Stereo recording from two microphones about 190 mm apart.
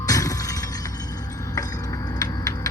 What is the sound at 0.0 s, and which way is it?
Shatter, 20° left (ahead or behind).